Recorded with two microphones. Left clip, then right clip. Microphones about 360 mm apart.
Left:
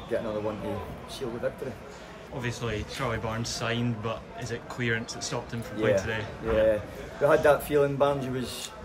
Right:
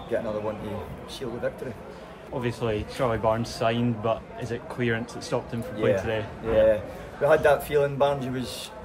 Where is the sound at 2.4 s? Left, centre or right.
Centre.